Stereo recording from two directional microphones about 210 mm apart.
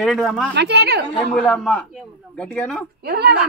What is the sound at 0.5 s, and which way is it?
Speech, 50° right (ahead or behind).